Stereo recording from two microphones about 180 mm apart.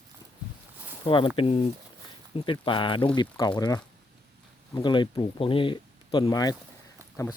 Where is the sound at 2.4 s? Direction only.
25° left (ahead or behind).